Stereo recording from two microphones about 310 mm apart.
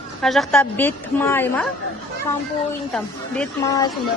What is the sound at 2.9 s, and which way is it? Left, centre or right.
Speech, centre.